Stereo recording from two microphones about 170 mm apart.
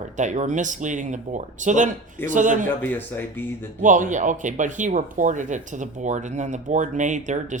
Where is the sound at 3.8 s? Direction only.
45° right (ahead or behind).